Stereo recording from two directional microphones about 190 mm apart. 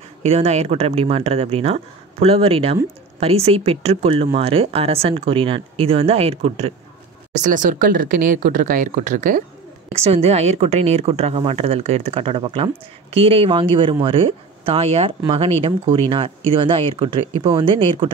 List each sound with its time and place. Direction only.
0.2 s speech: 35° right (ahead or behind)
7.4 s speech: 40° right (ahead or behind); by 18.1 s 25° right (ahead or behind)